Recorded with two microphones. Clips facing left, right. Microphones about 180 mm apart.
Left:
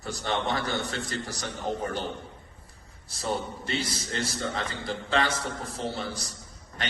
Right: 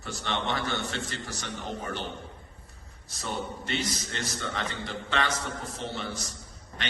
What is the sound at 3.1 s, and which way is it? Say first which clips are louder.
A man's voice: left 3 dB; 35° left (ahead or behind).